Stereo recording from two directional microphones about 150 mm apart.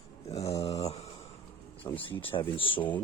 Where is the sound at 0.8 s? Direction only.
45° left (ahead or behind).